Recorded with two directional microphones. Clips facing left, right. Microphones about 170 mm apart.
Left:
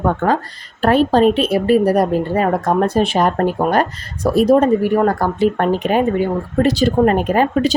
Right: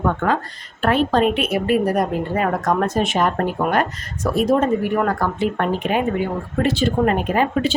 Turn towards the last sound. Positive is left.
turn(degrees=40)  # may be behind; listen again after turning